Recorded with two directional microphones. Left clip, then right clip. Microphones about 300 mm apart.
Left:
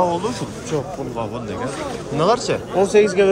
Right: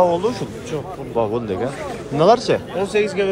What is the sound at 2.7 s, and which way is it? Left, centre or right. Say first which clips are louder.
Speech: left 5 dB; left.